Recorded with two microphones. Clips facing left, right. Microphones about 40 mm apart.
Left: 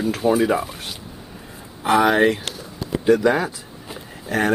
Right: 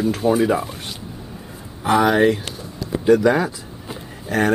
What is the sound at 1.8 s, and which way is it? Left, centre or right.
Speech, centre.